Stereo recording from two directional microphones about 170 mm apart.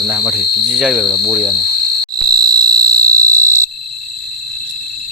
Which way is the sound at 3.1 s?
20° right (ahead or behind).